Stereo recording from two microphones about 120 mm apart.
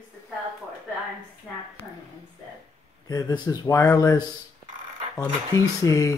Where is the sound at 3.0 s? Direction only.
35° left (ahead or behind).